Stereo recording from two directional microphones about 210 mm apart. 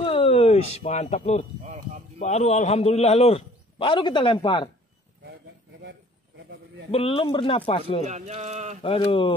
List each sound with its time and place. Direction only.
0.0 s a sound: 25° left (ahead or behind)
2.1 s a man's voice: 30° left (ahead or behind)
6.9 s a man's voice: 25° left (ahead or behind)
8.1 s speech: 35° right (ahead or behind)
8.8 s a man's voice: 25° left (ahead or behind)